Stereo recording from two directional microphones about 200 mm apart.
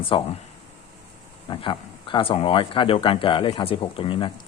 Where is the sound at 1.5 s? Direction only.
25° left (ahead or behind).